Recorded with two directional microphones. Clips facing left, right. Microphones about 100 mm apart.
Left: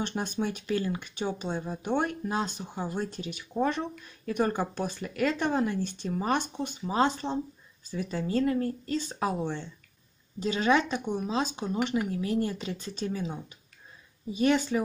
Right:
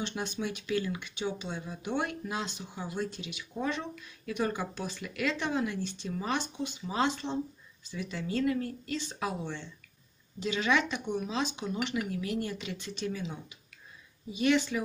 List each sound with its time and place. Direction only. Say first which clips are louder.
0.0 s speech: left 4 dB; 45° left (ahead or behind)